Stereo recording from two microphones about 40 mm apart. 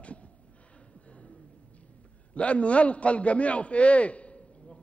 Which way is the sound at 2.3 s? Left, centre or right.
Left.